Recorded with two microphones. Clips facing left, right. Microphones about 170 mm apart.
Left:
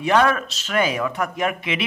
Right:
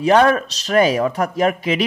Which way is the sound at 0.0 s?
35° right (ahead or behind).